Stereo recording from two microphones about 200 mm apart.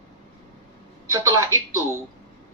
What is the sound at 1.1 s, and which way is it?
Speech, 15° right (ahead or behind).